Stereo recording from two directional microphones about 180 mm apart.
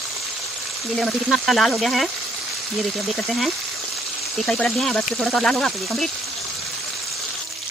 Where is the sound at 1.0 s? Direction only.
Centre (ahead or behind).